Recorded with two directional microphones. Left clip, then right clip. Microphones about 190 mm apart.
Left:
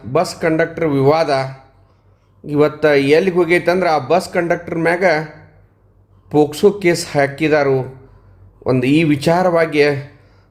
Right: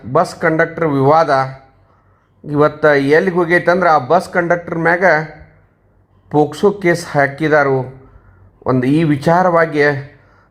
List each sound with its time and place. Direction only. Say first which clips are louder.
0.1 s a man's voice: right 2 dB; centre (ahead or behind)
2.5 s a man's voice: right 2 dB; 5° left (ahead or behind)
4.2 s speech: right 2 dB; 20° left (ahead or behind)
4.4 s a man's voice: right 2 dB; 5° left (ahead or behind)
6.2 s a man's voice: even; 5° left (ahead or behind)
8.8 s a man's voice: left 1 dB; 5° left (ahead or behind)